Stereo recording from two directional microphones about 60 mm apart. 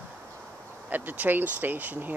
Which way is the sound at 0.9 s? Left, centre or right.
Right.